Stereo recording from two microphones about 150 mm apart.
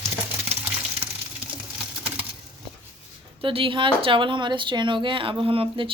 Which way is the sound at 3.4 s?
35° right (ahead or behind).